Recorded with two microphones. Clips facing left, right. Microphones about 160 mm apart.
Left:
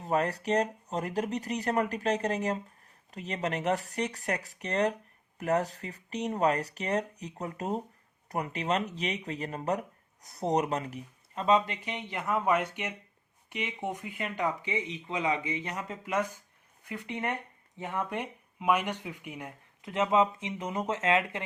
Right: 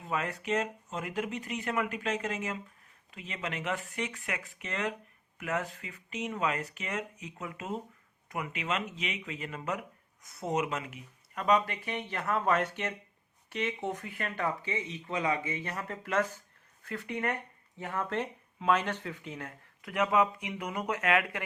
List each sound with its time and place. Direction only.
0.0 s speech: 40° left (ahead or behind)
11.4 s speech: 25° left (ahead or behind)